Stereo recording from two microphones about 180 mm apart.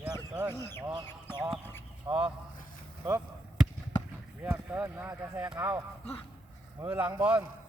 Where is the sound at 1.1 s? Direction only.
10° left (ahead or behind).